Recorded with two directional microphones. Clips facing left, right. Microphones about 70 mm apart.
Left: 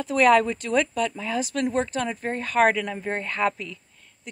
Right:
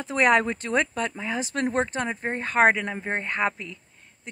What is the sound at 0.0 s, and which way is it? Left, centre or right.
Speech, right.